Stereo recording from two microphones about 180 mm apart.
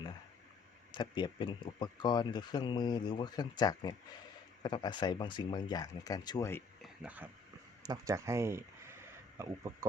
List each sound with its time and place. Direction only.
0.9 s speech: 25° left (ahead or behind)
6.8 s a sound: 5° right (ahead or behind)
7.8 s speech: 20° right (ahead or behind)